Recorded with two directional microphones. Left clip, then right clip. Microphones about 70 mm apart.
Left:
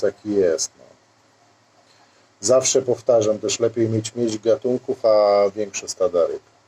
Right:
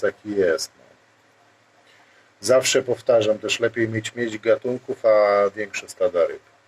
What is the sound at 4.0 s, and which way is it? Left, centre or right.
Speech, left.